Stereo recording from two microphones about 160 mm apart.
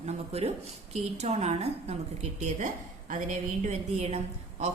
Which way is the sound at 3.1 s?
55° right (ahead or behind).